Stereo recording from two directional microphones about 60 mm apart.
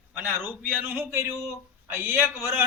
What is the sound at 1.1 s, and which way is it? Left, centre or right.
Speech, right.